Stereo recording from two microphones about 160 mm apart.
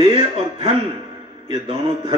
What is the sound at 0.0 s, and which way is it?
Speech, 35° right (ahead or behind).